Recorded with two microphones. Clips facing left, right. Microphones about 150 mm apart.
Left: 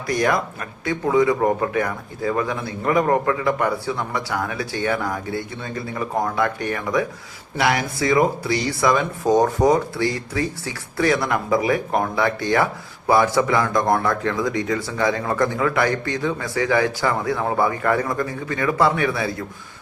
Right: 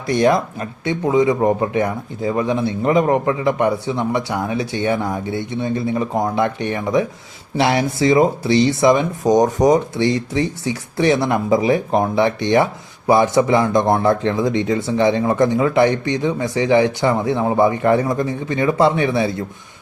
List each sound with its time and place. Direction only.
0.1 s speech: 25° right (ahead or behind)